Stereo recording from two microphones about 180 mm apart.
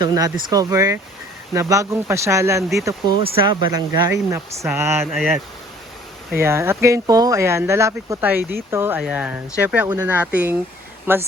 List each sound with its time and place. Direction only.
0.0 s speech: 20° right (ahead or behind)
5.1 s speech: centre (ahead or behind)
6.4 s speech: 15° right (ahead or behind)